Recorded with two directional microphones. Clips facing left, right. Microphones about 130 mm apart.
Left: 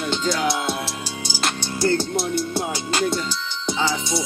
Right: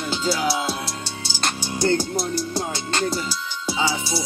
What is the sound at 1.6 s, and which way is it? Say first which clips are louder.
Music: even; 15° right (ahead or behind).